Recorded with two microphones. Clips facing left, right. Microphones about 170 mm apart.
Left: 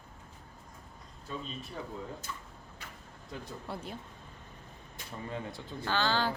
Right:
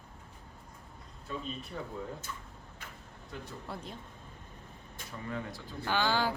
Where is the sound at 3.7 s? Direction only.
5° left (ahead or behind).